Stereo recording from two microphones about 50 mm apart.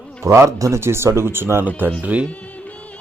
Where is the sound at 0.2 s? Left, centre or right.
Right.